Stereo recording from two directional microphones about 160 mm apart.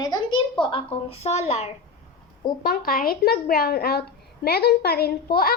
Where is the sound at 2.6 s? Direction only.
65° left (ahead or behind).